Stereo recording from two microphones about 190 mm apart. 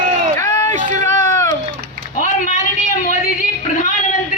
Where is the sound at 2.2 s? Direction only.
40° left (ahead or behind).